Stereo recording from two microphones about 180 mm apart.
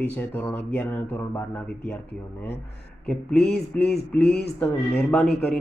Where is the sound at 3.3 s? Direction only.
65° left (ahead or behind).